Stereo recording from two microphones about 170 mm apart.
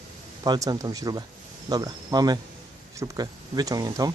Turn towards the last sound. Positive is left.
turn(degrees=-20)  # may be behind; listen again after turning